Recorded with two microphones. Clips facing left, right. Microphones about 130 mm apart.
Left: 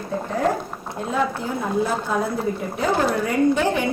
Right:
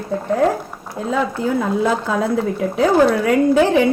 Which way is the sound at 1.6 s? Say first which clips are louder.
Right 1 dB; 90° right.